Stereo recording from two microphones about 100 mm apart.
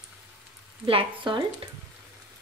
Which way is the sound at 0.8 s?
55° right (ahead or behind).